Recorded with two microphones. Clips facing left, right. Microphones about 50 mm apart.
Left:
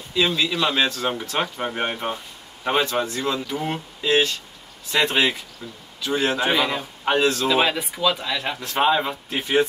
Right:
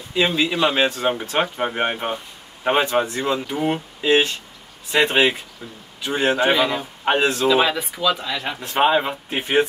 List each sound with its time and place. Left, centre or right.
0.1 s speech: right
7.4 s speech: centre
8.5 s speech: right